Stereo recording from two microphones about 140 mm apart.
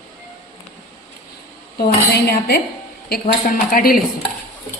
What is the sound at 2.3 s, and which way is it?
Speech, 90° left.